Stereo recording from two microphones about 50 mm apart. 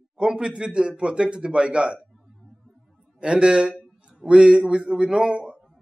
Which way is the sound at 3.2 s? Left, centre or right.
Centre.